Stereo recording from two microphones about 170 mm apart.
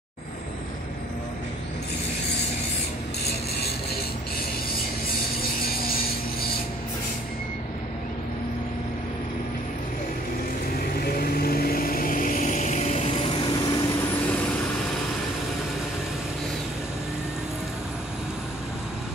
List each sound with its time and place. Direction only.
11.0 s vehicle: 65° left (ahead or behind); by 13.8 s 25° left (ahead or behind)
14.3 s vehicle: 5° left (ahead or behind)